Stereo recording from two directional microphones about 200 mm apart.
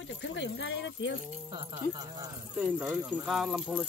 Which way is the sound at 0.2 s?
65° left (ahead or behind).